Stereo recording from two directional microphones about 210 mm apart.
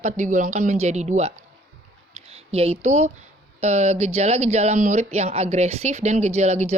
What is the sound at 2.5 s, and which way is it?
Speech, 30° right (ahead or behind).